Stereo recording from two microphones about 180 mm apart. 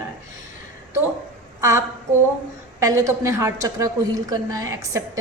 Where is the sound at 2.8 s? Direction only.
15° right (ahead or behind).